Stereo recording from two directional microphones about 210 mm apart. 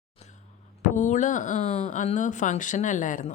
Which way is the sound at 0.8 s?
35° left (ahead or behind).